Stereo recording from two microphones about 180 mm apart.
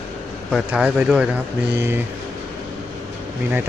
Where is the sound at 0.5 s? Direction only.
5° right (ahead or behind).